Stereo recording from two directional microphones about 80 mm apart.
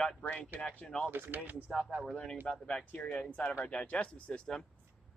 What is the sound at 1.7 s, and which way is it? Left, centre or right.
Speech, centre.